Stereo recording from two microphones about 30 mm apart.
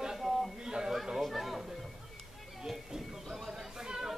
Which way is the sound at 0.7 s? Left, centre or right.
Right.